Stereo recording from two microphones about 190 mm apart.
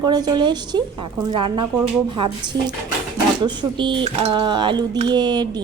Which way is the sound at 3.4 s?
25° right (ahead or behind).